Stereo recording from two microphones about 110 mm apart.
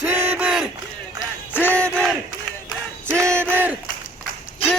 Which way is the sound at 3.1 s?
25° right (ahead or behind).